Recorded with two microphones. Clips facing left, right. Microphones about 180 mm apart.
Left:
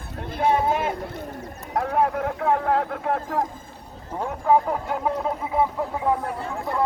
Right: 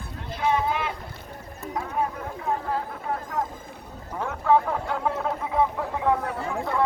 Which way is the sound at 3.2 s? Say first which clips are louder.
Left 3 dB; 40° left (ahead or behind).